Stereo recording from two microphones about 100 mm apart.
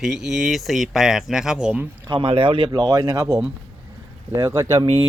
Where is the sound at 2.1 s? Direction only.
65° right (ahead or behind).